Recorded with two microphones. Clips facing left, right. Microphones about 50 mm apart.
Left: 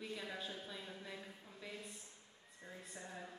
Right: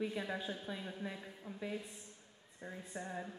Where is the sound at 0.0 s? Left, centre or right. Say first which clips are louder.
Right 7 dB; right.